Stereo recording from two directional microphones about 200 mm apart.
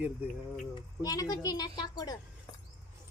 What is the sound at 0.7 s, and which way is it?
A woman's voice, 20° left (ahead or behind).